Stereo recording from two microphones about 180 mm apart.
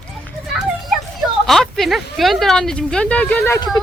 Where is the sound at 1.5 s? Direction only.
Centre (ahead or behind).